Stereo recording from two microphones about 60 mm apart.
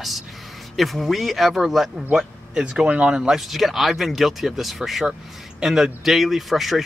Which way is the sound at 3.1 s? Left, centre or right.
Centre.